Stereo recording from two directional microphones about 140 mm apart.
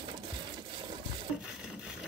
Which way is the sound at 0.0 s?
35° right (ahead or behind).